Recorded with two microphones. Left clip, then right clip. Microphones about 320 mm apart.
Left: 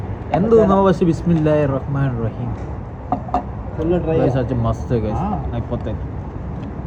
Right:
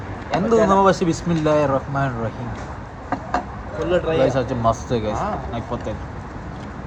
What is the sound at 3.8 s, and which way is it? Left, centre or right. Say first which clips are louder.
Speech: even; centre.